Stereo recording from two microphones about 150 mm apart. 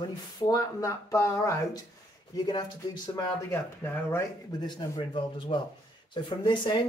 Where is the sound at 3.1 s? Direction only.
15° left (ahead or behind).